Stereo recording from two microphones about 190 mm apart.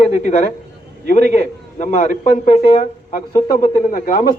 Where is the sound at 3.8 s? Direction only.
50° left (ahead or behind).